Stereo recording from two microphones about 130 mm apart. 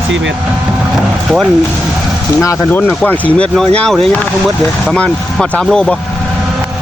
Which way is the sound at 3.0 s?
10° left (ahead or behind).